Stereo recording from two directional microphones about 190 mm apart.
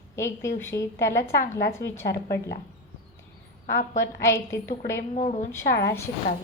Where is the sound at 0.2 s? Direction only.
15° left (ahead or behind).